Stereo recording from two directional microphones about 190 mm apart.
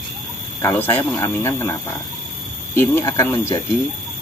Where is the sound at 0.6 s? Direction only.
15° left (ahead or behind).